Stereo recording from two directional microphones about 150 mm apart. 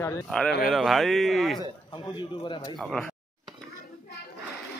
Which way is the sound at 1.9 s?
30° left (ahead or behind).